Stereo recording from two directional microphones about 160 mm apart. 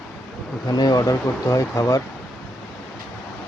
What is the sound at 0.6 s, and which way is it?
Speech, 25° left (ahead or behind).